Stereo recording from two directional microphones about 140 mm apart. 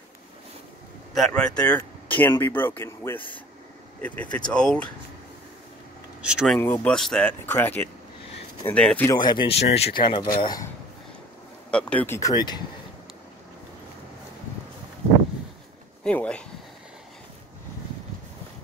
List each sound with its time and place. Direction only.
1.1 s speech: 5° left (ahead or behind)
6.2 s speech: 5° right (ahead or behind)
6.5 s speech: 10° left (ahead or behind)
7.4 s speech: 15° left (ahead or behind)
9.0 s speech: 30° left (ahead or behind)
9.6 s speech: 50° left (ahead or behind)
9.9 s speech: 35° left (ahead or behind)
11.7 s speech: 10° left (ahead or behind)
12.2 s speech: 25° left (ahead or behind)
16.0 s speech: 10° left (ahead or behind)